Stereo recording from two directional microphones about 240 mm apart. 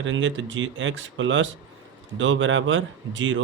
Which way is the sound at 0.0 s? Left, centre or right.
Right.